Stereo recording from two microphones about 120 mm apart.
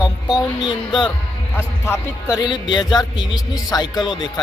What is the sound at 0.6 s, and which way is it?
Speech, 40° left (ahead or behind).